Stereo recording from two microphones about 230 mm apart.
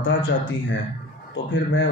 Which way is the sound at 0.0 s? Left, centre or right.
Left.